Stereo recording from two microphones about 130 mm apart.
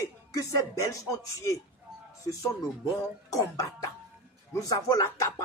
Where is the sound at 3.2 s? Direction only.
25° left (ahead or behind).